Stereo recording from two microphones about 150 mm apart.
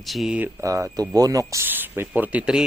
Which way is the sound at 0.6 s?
20° right (ahead or behind).